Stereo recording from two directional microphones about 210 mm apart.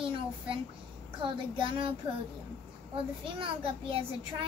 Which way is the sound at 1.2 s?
25° right (ahead or behind).